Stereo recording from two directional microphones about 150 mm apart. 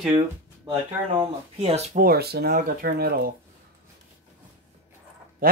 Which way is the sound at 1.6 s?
40° right (ahead or behind).